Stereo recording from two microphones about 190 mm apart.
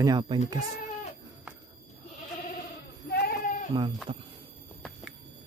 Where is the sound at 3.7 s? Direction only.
25° right (ahead or behind).